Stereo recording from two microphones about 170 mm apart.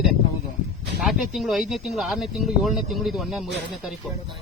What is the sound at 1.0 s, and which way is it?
Speech, centre (ahead or behind).